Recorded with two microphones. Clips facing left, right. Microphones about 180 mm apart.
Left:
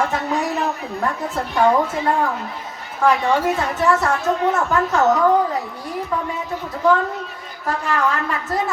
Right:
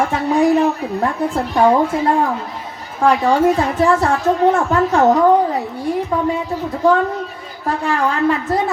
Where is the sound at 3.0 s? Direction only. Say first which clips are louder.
Right 4 dB; 35° right (ahead or behind).